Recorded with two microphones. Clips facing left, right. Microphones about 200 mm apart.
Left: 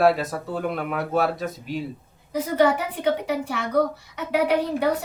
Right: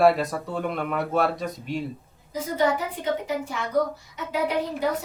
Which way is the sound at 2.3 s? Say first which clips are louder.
Left 4 dB; 65° left (ahead or behind).